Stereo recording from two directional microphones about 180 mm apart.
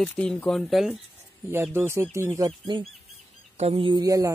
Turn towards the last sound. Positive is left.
turn(degrees=-20)  # may be behind; listen again after turning